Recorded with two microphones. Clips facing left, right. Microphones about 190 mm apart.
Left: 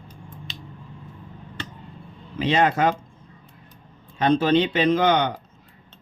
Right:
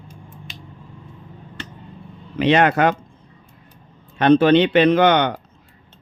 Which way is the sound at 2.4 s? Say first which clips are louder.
Right 4 dB; 70° right (ahead or behind).